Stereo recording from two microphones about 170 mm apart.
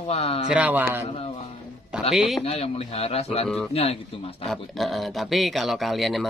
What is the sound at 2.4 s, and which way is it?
Speech, 35° left (ahead or behind).